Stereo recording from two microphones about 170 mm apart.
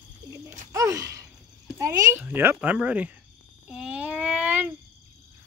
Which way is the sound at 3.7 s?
5° right (ahead or behind).